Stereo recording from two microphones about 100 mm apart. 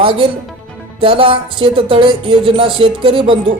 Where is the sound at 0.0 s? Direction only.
60° right (ahead or behind).